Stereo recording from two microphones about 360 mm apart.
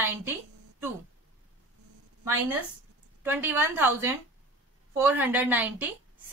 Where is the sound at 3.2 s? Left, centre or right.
Centre.